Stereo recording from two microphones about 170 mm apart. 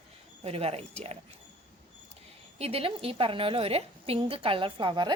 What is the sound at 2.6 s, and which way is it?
A woman's voice, 35° right (ahead or behind).